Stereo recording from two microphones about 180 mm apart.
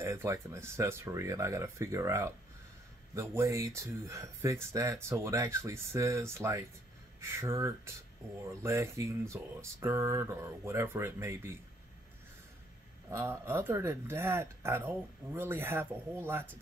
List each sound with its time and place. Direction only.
0.0 s speech: 15° right (ahead or behind)
13.1 s speech: 15° right (ahead or behind)